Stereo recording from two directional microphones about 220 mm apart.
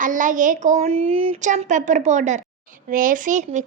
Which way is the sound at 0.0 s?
35° right (ahead or behind).